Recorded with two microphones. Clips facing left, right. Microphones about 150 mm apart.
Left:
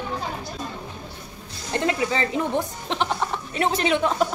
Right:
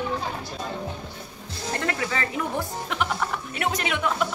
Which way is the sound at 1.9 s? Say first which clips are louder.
Left 6 dB; 20° left (ahead or behind).